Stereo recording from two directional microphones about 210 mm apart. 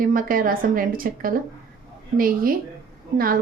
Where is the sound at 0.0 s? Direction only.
40° right (ahead or behind).